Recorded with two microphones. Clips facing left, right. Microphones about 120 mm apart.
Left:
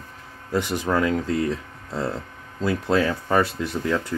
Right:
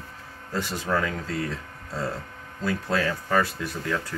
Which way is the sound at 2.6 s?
20° left (ahead or behind).